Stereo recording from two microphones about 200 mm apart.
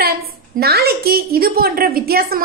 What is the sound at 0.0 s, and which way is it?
A woman's voice, 50° right (ahead or behind).